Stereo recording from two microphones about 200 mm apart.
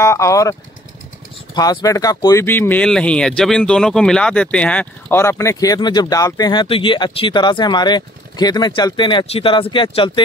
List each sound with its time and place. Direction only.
0.0 s speech: 15° left (ahead or behind)